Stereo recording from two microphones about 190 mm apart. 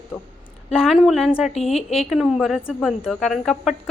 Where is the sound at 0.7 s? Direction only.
5° right (ahead or behind).